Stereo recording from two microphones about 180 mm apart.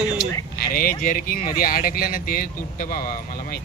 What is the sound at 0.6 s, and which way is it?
Speech, 55° left (ahead or behind).